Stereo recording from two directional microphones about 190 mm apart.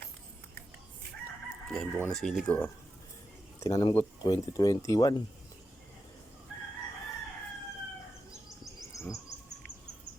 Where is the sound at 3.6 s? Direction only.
20° left (ahead or behind).